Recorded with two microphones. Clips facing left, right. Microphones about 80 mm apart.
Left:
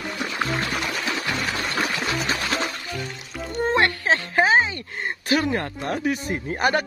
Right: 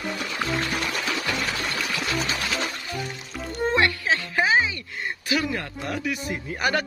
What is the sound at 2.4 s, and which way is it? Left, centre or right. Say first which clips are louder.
Music: left 2 dB; left.